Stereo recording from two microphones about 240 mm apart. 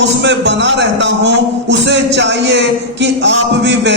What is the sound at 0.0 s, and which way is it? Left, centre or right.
A man's voice, right.